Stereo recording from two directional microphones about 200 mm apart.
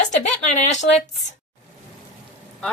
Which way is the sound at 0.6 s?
35° left (ahead or behind).